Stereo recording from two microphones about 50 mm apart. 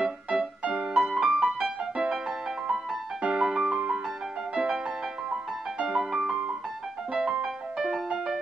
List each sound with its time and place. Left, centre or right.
0.0 s music: centre
3.2 s music: centre